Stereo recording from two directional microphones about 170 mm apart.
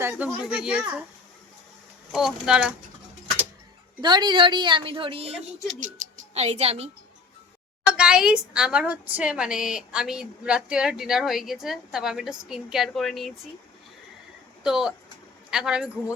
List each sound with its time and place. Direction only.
0.0 s speech: 10° right (ahead or behind)
2.1 s a woman's voice: centre (ahead or behind)
4.0 s a woman's voice: 25° right (ahead or behind)
7.9 s a woman's voice: 5° right (ahead or behind)
14.6 s speech: 5° right (ahead or behind)